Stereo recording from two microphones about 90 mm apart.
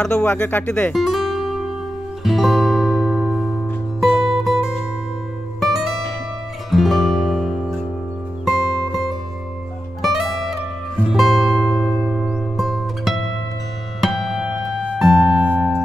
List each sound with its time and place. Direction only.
0.0 s speech: 15° left (ahead or behind)
0.9 s music: centre (ahead or behind)
5.6 s zither: 5° right (ahead or behind)
6.7 s music: centre (ahead or behind)
10.0 s zither: 5° right (ahead or behind)
11.1 s music: 5° right (ahead or behind)